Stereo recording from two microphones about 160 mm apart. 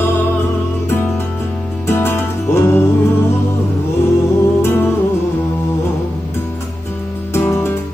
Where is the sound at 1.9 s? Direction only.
15° left (ahead or behind).